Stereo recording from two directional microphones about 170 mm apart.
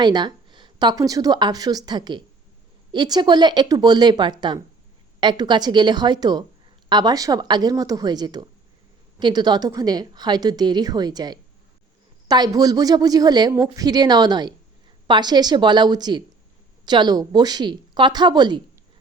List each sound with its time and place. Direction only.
0.0 s a woman's voice: 25° right (ahead or behind)